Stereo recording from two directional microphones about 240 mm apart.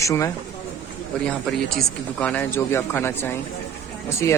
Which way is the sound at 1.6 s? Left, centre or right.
Centre.